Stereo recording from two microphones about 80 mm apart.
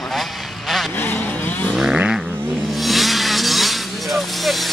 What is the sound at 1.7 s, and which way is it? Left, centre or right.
Vehicle, centre.